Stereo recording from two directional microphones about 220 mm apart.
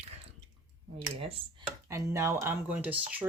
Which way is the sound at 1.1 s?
25° right (ahead or behind).